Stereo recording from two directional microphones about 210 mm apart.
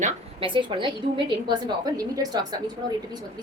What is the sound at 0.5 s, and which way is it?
A woman's voice, 20° right (ahead or behind).